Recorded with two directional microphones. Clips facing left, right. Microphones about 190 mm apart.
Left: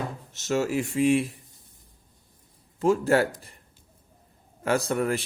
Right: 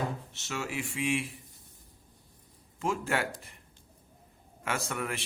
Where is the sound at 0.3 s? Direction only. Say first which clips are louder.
Left 15 dB; 40° left (ahead or behind).